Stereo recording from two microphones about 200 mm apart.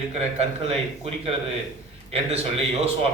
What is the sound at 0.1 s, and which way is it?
A man's voice, 30° right (ahead or behind).